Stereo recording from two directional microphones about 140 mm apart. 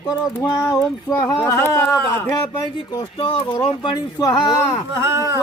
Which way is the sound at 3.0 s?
40° left (ahead or behind).